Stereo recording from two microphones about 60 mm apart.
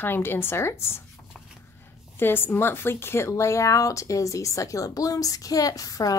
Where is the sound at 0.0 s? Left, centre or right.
Left.